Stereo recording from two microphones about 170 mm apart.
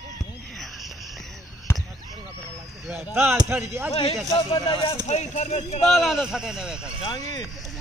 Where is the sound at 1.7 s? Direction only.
15° left (ahead or behind).